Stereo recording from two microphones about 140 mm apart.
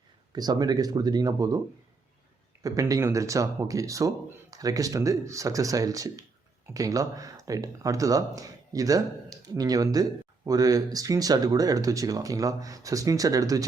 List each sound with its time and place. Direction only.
0.3 s speech: 30° right (ahead or behind)
2.6 s speech: 25° right (ahead or behind)